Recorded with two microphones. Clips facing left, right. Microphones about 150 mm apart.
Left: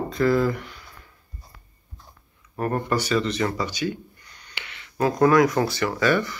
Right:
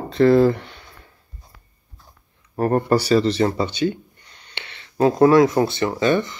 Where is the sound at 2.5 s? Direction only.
35° right (ahead or behind).